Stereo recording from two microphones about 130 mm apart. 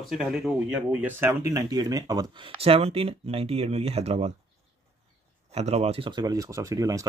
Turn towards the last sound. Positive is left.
turn(degrees=-25)  # may be behind; listen again after turning